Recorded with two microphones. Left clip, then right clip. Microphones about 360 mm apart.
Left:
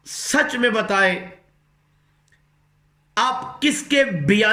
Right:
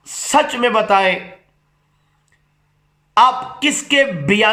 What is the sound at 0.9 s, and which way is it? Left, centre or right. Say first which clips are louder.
Speech: right 3 dB; right.